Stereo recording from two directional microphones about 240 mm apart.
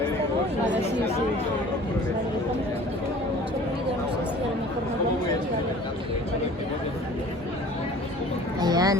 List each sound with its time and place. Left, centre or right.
8.6 s boat: centre